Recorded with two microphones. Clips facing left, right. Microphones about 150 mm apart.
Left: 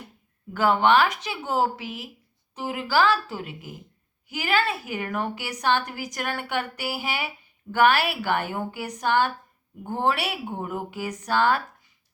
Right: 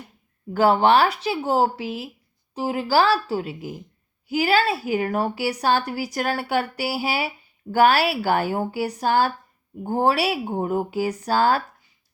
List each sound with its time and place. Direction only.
0.5 s a woman's voice: 35° right (ahead or behind)